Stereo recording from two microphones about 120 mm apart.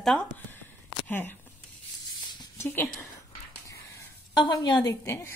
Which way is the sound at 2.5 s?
20° left (ahead or behind).